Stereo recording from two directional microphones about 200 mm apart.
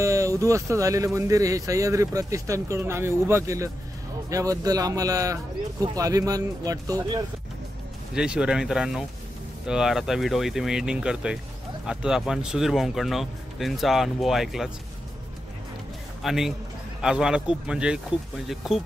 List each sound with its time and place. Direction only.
0.0 s speech: 15° right (ahead or behind)
8.1 s speech: 5° right (ahead or behind)
16.2 s speech: centre (ahead or behind)